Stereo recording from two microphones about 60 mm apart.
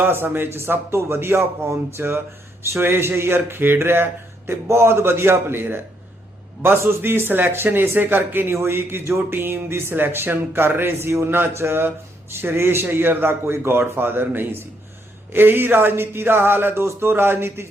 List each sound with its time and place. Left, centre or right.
0.0 s speech: right